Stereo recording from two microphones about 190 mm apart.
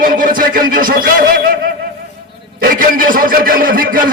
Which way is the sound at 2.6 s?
45° right (ahead or behind).